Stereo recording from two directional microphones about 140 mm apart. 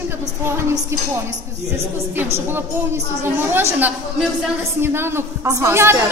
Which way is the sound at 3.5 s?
15° right (ahead or behind).